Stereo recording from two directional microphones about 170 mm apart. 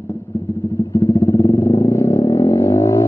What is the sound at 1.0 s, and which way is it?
Vehicle, 15° left (ahead or behind).